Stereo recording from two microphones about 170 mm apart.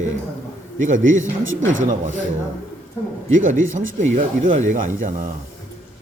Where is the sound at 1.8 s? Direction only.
50° right (ahead or behind).